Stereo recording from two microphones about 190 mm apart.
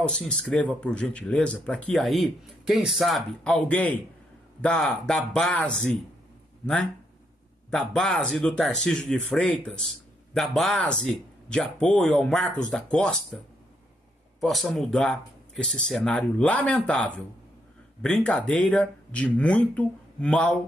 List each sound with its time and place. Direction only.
0.0 s speech: 5° left (ahead or behind)
14.4 s speech: centre (ahead or behind)